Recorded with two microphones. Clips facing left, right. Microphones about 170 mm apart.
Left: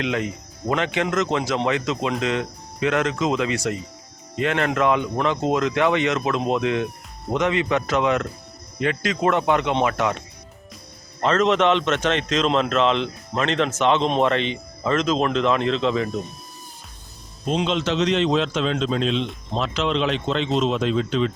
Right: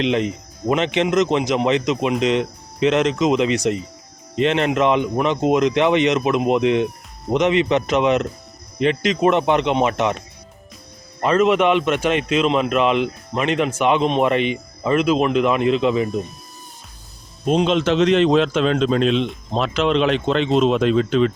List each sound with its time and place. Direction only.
0.0 s speech: 20° right (ahead or behind)
11.2 s a man's voice: 10° right (ahead or behind)
17.7 s a man's voice: 55° right (ahead or behind)